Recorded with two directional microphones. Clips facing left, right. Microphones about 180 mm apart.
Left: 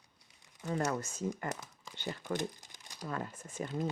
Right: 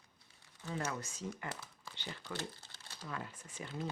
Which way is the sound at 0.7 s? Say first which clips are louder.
Left 6 dB; 45° left (ahead or behind).